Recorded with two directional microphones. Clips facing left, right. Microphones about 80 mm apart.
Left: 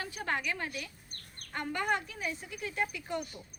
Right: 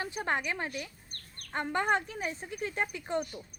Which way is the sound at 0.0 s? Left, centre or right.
Right.